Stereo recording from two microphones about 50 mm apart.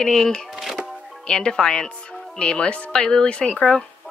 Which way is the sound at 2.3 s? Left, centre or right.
Left.